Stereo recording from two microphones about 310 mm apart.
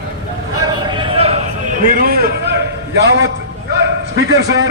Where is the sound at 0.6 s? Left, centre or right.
Centre.